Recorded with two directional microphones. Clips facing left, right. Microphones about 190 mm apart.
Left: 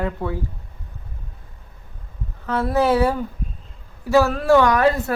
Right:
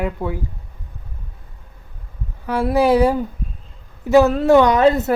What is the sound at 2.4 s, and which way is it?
A man's voice, 10° right (ahead or behind).